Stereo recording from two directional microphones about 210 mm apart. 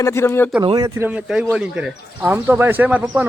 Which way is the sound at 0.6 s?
20° right (ahead or behind).